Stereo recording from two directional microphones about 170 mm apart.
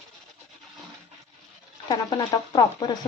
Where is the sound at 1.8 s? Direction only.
25° left (ahead or behind).